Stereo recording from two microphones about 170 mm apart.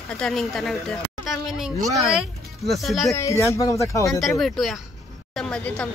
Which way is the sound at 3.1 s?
20° left (ahead or behind).